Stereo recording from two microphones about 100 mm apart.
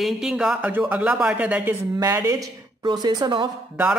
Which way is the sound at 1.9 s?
30° right (ahead or behind).